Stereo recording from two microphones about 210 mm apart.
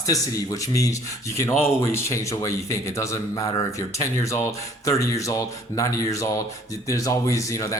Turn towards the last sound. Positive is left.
turn(degrees=15)  # may be behind; listen again after turning